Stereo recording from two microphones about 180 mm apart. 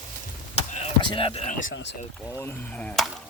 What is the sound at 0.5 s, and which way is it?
Chop, 35° left (ahead or behind).